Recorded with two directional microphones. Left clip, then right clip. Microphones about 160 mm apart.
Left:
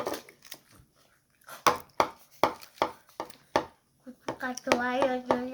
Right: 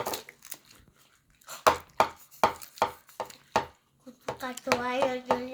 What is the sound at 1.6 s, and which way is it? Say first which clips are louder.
Chopping: right 2 dB; 70° left (ahead or behind).